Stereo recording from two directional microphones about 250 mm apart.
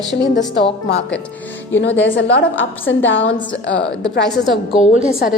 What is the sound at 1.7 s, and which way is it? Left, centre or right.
A woman's voice, left.